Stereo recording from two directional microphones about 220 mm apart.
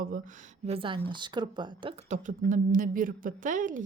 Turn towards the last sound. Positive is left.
turn(degrees=-35)  # may be behind; listen again after turning